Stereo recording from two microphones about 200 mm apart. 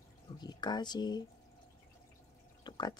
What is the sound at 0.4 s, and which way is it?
Speech, 20° left (ahead or behind).